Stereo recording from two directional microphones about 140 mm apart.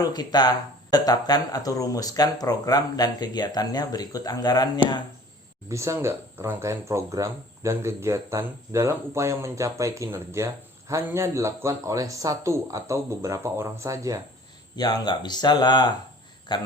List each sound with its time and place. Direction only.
0.0 s speech: 30° left (ahead or behind)
5.6 s speech: 20° right (ahead or behind)
14.8 s speech: 30° left (ahead or behind)